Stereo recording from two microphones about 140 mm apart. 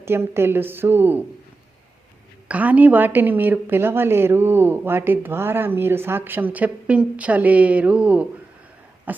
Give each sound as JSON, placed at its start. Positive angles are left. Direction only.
{"t": 0.0, "sound": "a woman's voice", "side_deg": -15}
{"t": 2.5, "sound": "a woman's voice", "side_deg": -10}
{"t": 9.1, "sound": "cough", "side_deg": -10}